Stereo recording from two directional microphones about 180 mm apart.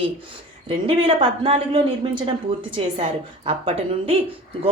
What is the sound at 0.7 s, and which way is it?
A woman's voice, 30° right (ahead or behind).